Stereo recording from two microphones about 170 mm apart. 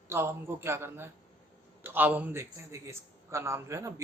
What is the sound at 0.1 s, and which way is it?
A man's voice, 15° right (ahead or behind).